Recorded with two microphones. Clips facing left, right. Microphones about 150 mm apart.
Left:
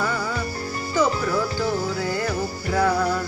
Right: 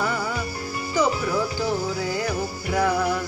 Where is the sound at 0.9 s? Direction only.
15° right (ahead or behind).